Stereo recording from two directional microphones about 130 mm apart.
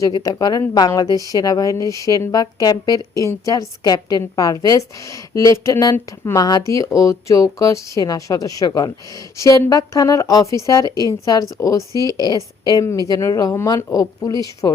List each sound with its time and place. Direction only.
0.0 s a woman's voice: 30° left (ahead or behind)